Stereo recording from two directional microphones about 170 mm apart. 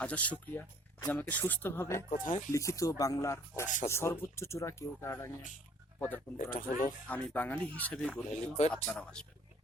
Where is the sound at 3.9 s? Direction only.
15° left (ahead or behind).